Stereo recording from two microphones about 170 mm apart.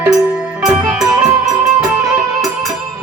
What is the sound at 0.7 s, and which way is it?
Music, centre (ahead or behind).